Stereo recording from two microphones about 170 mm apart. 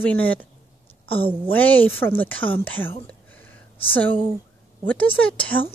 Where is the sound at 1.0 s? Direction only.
35° left (ahead or behind).